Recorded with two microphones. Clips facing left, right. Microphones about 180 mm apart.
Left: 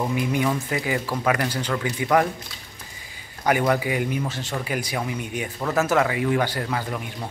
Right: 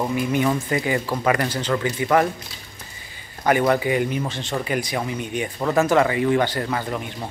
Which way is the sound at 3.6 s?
5° left (ahead or behind).